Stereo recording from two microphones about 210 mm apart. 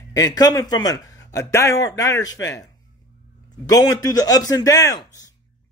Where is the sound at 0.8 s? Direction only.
15° left (ahead or behind).